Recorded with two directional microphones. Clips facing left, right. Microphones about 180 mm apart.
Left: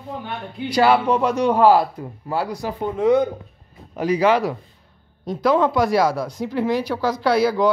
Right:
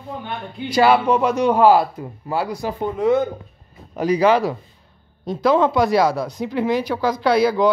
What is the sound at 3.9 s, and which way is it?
Speech, 40° right (ahead or behind).